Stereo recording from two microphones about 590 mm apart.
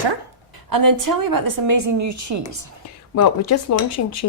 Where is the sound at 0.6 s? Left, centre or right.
Right.